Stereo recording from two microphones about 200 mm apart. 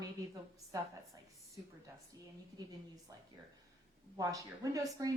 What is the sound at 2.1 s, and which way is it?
A woman's voice, 20° right (ahead or behind).